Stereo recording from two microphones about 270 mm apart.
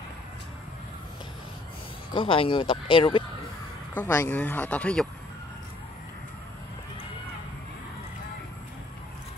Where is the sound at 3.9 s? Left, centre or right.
Centre.